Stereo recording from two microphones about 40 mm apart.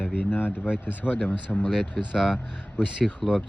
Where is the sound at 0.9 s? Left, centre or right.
Left.